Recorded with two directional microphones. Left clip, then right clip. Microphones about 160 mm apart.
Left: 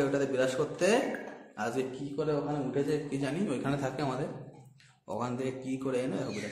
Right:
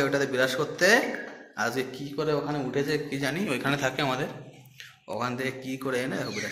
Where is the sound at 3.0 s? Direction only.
Centre (ahead or behind).